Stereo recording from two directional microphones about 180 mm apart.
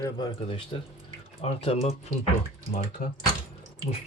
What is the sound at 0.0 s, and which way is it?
Speech, 25° left (ahead or behind).